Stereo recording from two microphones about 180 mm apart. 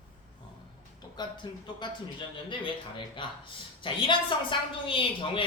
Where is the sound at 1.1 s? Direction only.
25° left (ahead or behind).